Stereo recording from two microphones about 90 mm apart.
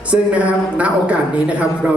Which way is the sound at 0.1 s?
15° right (ahead or behind).